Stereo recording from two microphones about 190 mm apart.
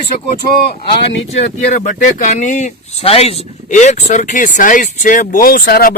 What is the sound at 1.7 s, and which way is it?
Speech, 40° left (ahead or behind).